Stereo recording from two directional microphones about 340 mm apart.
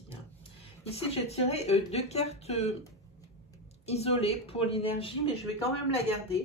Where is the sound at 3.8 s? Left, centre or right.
Centre.